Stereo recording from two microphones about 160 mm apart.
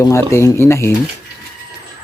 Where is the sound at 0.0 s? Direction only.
20° left (ahead or behind).